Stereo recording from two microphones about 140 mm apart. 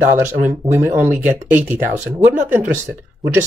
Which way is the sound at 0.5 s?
15° right (ahead or behind).